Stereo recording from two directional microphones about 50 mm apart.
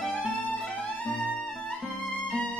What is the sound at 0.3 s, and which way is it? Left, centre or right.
Music, right.